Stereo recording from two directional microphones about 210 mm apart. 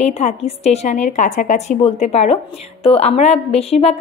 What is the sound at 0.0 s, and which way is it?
A woman's voice, 30° left (ahead or behind).